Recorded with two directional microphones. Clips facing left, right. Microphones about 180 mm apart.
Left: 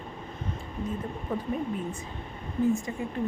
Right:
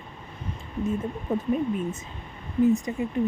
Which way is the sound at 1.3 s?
20° right (ahead or behind).